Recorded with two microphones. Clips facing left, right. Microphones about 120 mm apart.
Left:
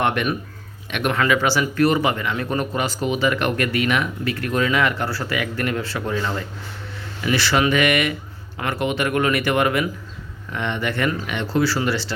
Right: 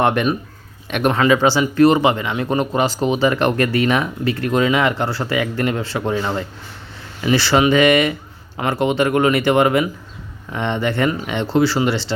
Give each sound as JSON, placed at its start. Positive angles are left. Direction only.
{"t": 0.0, "sound": "speech", "side_deg": -35}